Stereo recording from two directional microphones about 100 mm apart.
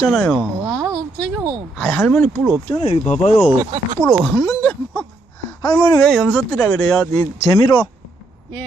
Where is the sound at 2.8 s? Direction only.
90° left.